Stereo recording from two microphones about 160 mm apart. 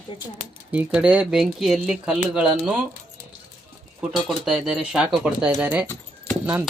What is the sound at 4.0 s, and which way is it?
Speech, 5° right (ahead or behind).